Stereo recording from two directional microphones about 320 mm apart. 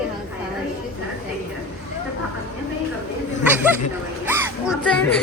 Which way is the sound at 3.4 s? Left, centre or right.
Centre.